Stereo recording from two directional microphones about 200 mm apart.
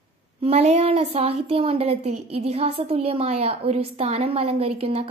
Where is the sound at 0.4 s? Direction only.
30° right (ahead or behind).